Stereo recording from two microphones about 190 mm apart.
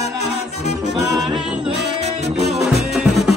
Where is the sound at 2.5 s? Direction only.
Centre (ahead or behind).